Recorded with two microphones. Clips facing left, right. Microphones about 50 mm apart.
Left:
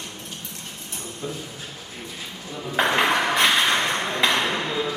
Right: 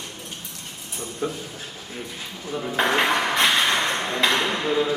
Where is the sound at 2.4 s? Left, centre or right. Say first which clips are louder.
Right 6 dB; right.